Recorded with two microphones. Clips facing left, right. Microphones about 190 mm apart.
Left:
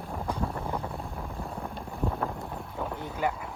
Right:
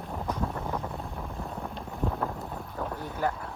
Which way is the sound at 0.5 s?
10° left (ahead or behind).